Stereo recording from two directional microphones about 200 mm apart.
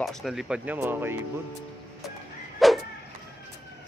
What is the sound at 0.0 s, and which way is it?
Speech, centre (ahead or behind).